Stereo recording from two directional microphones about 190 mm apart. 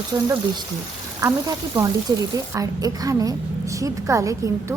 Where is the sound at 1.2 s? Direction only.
20° right (ahead or behind).